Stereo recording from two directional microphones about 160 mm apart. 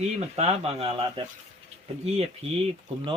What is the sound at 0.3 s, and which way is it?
Speech, 40° right (ahead or behind).